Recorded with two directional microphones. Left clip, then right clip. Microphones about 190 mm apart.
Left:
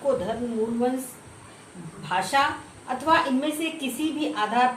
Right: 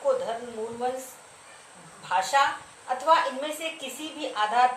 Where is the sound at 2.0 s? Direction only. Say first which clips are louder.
Even; 10° right (ahead or behind).